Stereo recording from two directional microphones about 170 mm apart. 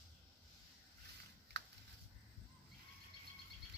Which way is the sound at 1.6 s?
80° right.